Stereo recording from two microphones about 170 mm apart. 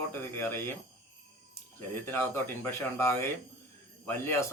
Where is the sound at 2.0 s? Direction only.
15° left (ahead or behind).